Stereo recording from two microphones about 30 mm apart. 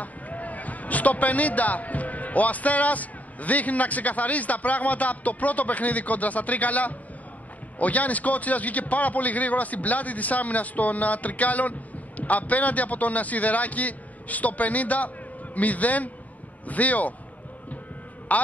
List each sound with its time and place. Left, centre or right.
0.0 s a man's voice: left
18.3 s a man's voice: left